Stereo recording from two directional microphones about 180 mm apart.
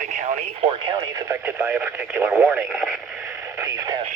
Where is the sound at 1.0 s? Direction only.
10° right (ahead or behind).